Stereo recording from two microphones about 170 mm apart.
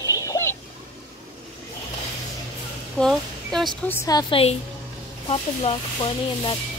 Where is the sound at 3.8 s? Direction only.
15° left (ahead or behind).